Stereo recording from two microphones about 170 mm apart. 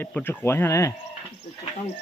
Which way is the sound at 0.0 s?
10° left (ahead or behind).